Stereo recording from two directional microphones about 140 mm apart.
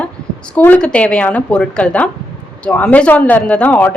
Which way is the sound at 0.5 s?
10° left (ahead or behind).